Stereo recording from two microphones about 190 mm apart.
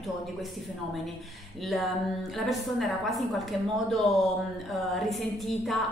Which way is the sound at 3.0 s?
Centre (ahead or behind).